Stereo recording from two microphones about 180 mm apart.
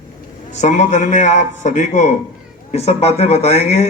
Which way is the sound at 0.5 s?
40° left (ahead or behind).